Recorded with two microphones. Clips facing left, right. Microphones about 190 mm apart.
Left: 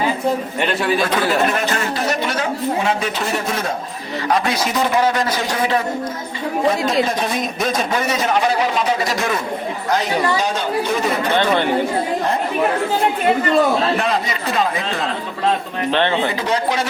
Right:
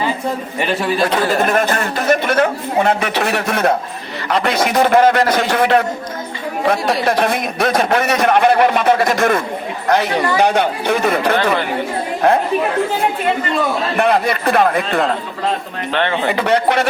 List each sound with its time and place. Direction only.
1.3 s a man's voice: 50° right (ahead or behind)
14.0 s a man's voice: 60° right (ahead or behind)
15.9 s speech: 25° left (ahead or behind)
16.3 s a man's voice: 65° right (ahead or behind)